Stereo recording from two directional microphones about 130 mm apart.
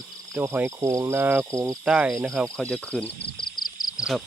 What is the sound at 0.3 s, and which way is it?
Speech, 15° right (ahead or behind).